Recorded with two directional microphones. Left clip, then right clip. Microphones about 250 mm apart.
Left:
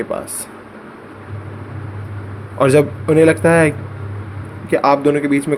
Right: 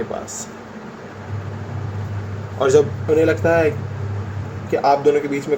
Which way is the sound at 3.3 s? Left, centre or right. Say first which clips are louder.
Left 4 dB; left.